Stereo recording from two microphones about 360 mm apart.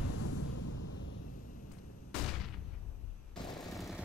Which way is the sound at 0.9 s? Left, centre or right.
Left.